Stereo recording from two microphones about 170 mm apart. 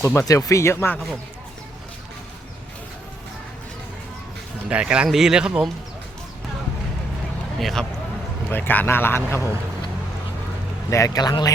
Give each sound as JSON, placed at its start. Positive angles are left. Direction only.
{"t": 0.0, "sound": "speech", "side_deg": 15}
{"t": 4.7, "sound": "speech", "side_deg": -5}
{"t": 7.6, "sound": "speech", "side_deg": 0}
{"t": 10.8, "sound": "a man's voice", "side_deg": 20}